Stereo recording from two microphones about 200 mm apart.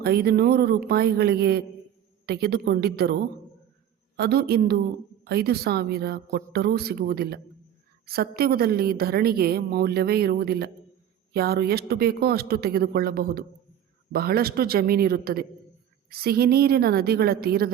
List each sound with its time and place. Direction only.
0.0 s a woman's voice: 50° right (ahead or behind)
4.2 s a woman's voice: 50° right (ahead or behind)